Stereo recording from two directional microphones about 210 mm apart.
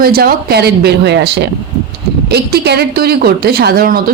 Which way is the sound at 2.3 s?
50° right (ahead or behind).